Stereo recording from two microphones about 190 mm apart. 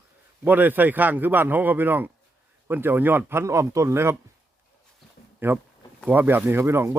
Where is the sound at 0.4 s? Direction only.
10° right (ahead or behind).